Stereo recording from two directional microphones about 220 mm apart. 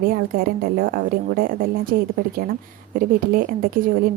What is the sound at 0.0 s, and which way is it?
A woman's voice, 40° right (ahead or behind).